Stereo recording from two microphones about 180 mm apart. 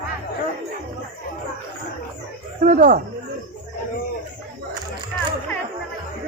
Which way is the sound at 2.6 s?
45° right (ahead or behind).